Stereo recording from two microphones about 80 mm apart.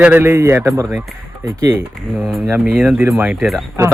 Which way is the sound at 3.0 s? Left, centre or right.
Right.